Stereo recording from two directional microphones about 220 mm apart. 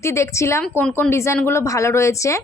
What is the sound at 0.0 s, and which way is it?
A woman's voice, 15° left (ahead or behind).